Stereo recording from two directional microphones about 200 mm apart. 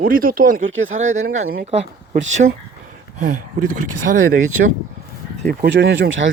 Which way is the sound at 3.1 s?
40° right (ahead or behind).